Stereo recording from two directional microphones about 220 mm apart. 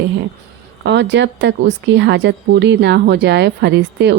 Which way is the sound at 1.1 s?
55° right (ahead or behind).